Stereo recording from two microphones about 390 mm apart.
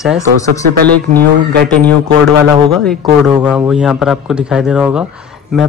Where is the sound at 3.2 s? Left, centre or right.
Centre.